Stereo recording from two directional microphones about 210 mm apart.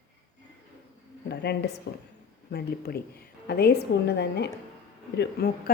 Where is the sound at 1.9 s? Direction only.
50° left (ahead or behind).